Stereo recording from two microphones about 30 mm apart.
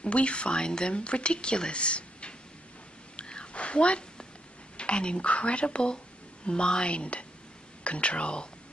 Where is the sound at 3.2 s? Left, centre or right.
Left.